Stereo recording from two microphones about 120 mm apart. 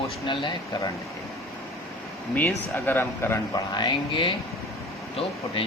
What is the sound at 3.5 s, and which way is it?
Speech, 40° left (ahead or behind).